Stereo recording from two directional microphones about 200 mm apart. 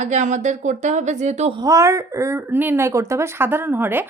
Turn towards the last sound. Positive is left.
turn(degrees=-10)  # may be behind; listen again after turning